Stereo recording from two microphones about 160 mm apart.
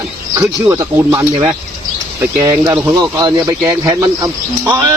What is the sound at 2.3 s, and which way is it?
Speech, 20° right (ahead or behind).